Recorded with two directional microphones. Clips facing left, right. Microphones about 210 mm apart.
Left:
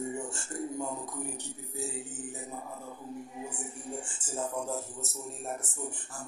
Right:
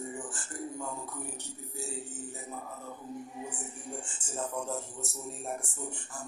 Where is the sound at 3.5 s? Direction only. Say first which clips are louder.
Left 2 dB; 10° left (ahead or behind).